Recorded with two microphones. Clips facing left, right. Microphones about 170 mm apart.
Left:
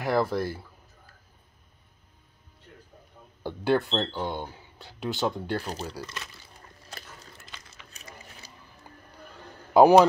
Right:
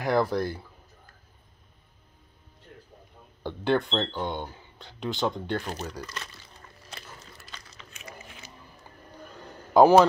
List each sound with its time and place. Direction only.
0.0 s speech: centre (ahead or behind)
3.4 s speech: 5° left (ahead or behind)
8.0 s a sound: 35° left (ahead or behind)
9.8 s speech: 15° left (ahead or behind)